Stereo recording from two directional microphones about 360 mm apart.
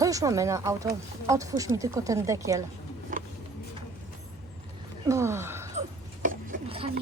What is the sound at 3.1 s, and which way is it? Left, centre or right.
Music, right.